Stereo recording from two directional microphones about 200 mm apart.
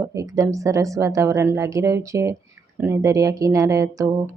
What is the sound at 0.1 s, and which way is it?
Speech, 15° right (ahead or behind).